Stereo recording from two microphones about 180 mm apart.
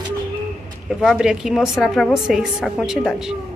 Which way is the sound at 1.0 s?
5° right (ahead or behind).